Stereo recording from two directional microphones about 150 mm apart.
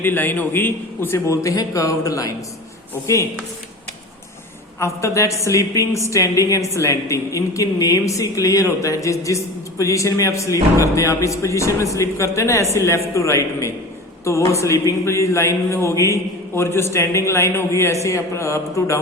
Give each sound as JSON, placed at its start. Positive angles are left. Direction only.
{"t": 0.0, "sound": "a woman's voice", "side_deg": 15}
{"t": 4.8, "sound": "a woman's voice", "side_deg": 20}